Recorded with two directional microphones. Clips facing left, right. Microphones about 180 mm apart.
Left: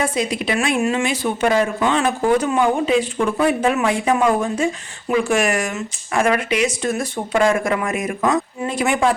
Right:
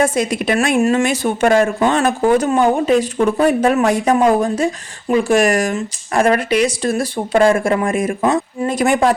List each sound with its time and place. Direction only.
0.0 s speech: 45° right (ahead or behind); by 8.4 s 30° right (ahead or behind)
8.6 s speech: 40° right (ahead or behind)